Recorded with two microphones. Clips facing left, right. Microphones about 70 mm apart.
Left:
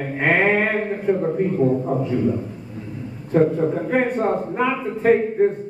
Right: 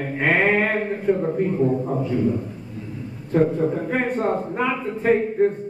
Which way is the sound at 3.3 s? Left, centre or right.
Centre.